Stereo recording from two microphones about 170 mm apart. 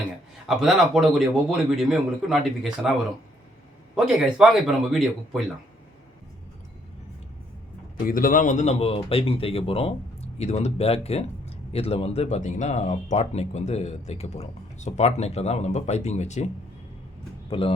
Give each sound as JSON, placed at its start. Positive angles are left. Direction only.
{"t": 0.4, "sound": "speech", "side_deg": 0}
{"t": 7.9, "sound": "speech", "side_deg": 55}
{"t": 17.5, "sound": "speech", "side_deg": 35}